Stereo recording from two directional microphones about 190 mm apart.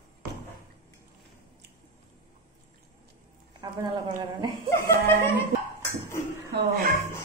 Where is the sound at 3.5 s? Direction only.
25° right (ahead or behind).